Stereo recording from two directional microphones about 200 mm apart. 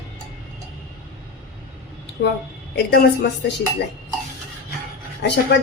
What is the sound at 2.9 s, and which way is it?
Speech, 55° left (ahead or behind).